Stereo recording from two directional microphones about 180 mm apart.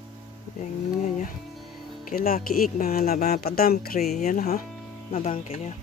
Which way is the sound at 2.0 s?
55° left (ahead or behind).